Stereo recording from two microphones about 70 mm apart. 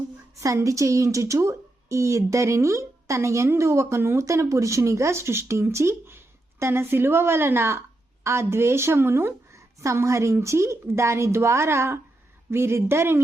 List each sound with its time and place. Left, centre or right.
0.4 s a woman's voice: right
9.8 s a woman's voice: right